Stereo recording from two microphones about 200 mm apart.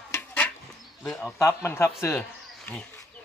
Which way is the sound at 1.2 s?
15° left (ahead or behind).